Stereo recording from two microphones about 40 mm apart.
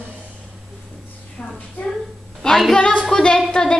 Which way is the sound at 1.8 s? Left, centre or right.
Left.